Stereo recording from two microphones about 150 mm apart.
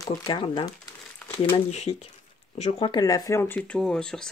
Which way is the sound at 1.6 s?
45° left (ahead or behind).